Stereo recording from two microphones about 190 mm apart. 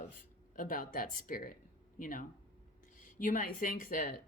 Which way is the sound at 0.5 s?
45° left (ahead or behind).